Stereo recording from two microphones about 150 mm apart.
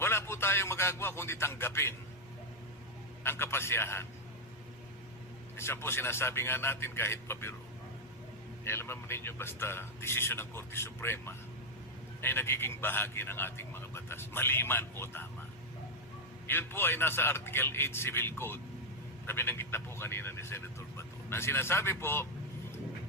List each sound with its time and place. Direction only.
0.0 s speech: 15° left (ahead or behind)
3.2 s a man's voice: 15° left (ahead or behind)
5.5 s a man's voice: 15° left (ahead or behind)
8.6 s a man's voice: 15° left (ahead or behind)
16.5 s a man's voice: 15° left (ahead or behind)